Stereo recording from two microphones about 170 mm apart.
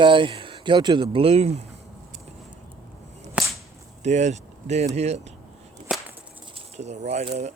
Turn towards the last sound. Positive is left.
turn(degrees=-40)  # may be behind; listen again after turning